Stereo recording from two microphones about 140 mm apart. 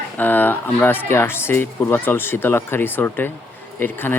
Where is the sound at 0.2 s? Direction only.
15° left (ahead or behind).